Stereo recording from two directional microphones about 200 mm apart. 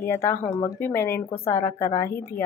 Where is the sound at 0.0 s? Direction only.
10° left (ahead or behind).